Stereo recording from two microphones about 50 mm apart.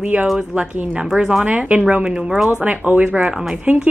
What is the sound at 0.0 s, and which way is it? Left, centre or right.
Speech, right.